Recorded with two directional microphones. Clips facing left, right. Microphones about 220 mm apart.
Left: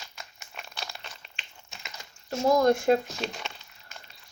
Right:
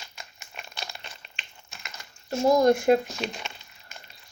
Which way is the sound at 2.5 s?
20° right (ahead or behind).